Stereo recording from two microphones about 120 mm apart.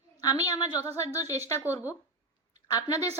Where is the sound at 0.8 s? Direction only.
25° left (ahead or behind).